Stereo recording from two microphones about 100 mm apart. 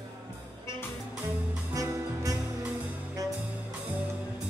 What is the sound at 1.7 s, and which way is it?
Music, 35° right (ahead or behind).